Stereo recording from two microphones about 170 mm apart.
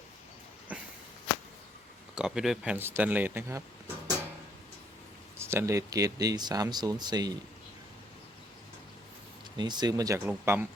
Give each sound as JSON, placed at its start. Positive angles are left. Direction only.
{"t": 0.7, "sound": "speech", "side_deg": -10}
{"t": 2.1, "sound": "speech", "side_deg": -5}
{"t": 5.4, "sound": "speech", "side_deg": -15}
{"t": 9.6, "sound": "speech", "side_deg": -25}